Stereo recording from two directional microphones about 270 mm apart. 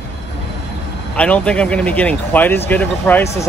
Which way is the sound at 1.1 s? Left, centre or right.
Centre.